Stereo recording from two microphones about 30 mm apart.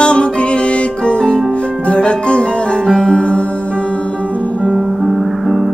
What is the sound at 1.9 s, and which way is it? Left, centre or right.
Music, left.